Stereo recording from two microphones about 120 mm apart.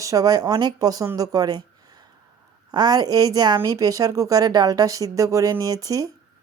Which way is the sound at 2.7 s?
35° right (ahead or behind).